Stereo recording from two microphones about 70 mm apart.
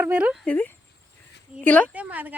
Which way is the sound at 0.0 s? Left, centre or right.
Right.